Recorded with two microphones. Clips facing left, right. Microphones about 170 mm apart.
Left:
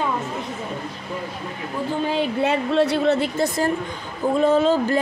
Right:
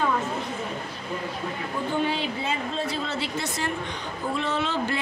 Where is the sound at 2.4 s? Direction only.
70° left (ahead or behind).